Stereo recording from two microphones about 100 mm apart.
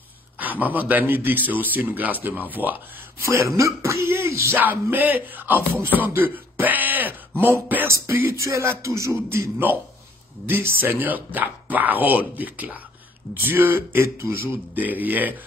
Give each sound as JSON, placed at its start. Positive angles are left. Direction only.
{"t": 0.4, "sound": "a man's voice", "side_deg": -15}
{"t": 3.3, "sound": "speech", "side_deg": -30}
{"t": 4.9, "sound": "a man's voice", "side_deg": -20}